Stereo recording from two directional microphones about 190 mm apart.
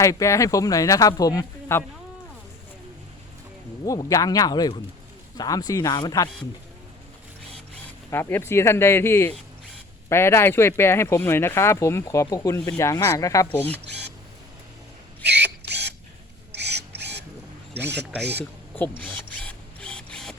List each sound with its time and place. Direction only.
0.0 s speech: 15° left (ahead or behind)
3.8 s speech: 15° left (ahead or behind)
8.1 s speech: 15° left (ahead or behind)
15.2 s camera: 65° right (ahead or behind)
16.5 s a sound: 60° right (ahead or behind)
18.2 s speech: 60° right (ahead or behind)
18.7 s printer: 10° left (ahead or behind)